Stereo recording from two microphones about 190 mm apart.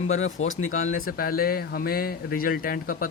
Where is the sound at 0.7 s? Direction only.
45° left (ahead or behind).